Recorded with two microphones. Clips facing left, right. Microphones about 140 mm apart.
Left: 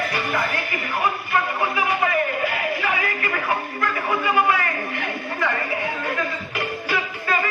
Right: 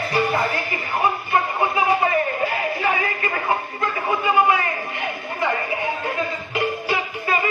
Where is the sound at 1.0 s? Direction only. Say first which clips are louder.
Right 2 dB; 25° right (ahead or behind).